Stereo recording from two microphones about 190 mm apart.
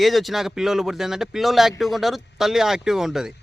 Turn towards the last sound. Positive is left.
turn(degrees=0)  # may be behind; listen again after turning